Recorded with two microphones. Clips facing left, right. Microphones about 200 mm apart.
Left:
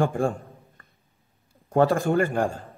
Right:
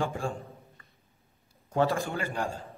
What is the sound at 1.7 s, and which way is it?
Speech, 50° left (ahead or behind).